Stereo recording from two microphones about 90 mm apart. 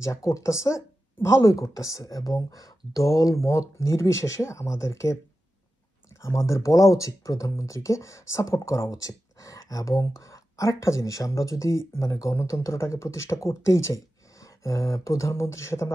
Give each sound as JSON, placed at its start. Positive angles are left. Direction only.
{"t": 0.0, "sound": "speech", "side_deg": 35}
{"t": 6.2, "sound": "speech", "side_deg": 35}